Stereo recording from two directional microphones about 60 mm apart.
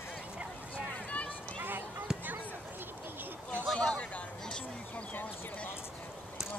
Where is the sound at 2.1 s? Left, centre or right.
Centre.